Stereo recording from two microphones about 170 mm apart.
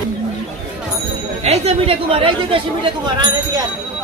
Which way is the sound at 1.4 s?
35° right (ahead or behind).